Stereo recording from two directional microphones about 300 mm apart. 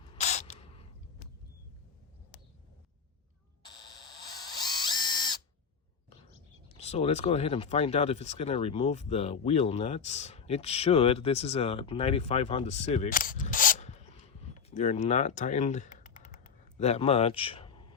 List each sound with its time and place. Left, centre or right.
0.1 s a sound: left
4.3 s ratchet: centre
6.7 s speech: left
15.4 s typing: left